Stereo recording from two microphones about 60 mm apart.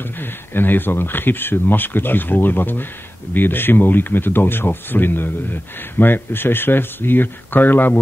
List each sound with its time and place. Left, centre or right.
0.2 s speech: left